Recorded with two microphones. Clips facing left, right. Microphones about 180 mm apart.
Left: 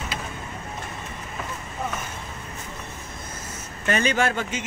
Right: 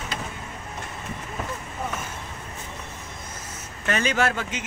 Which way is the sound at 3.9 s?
Centre (ahead or behind).